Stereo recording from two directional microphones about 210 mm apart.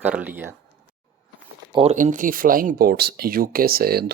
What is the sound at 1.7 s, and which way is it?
Speech, 35° right (ahead or behind).